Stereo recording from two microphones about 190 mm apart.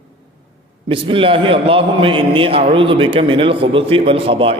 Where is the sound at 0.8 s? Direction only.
30° right (ahead or behind).